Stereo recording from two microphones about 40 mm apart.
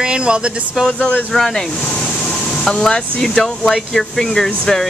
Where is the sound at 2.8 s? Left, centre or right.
Centre.